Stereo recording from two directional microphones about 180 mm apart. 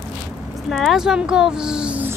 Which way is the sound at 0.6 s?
Centre (ahead or behind).